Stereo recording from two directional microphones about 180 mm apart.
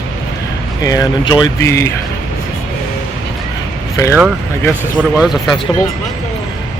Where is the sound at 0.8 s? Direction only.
20° left (ahead or behind).